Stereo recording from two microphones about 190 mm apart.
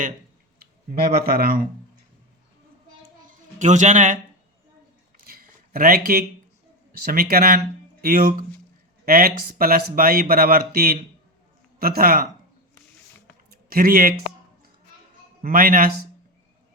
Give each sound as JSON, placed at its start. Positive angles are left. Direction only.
{"t": 0.9, "sound": "speech", "side_deg": -50}
{"t": 3.2, "sound": "music", "side_deg": -40}
{"t": 5.2, "sound": "a sound", "side_deg": -50}
{"t": 6.9, "sound": "speech", "side_deg": -50}
{"t": 13.7, "sound": "speech", "side_deg": -50}
{"t": 15.4, "sound": "speech", "side_deg": -45}